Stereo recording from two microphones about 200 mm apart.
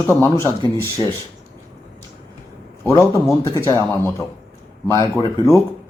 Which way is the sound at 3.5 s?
15° left (ahead or behind).